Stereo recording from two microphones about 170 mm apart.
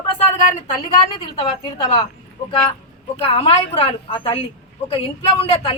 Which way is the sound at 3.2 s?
35° left (ahead or behind).